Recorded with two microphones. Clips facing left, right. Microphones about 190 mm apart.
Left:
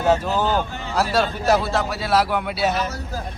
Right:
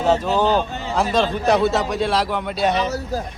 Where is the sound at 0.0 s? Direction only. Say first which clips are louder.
Right 2 dB; 10° left (ahead or behind).